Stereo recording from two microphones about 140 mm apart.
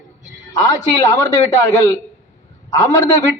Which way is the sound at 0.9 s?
25° left (ahead or behind).